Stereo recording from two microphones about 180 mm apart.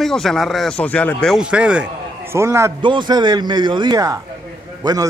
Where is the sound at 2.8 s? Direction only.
25° right (ahead or behind).